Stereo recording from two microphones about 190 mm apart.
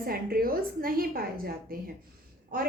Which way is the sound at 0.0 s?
50° right (ahead or behind).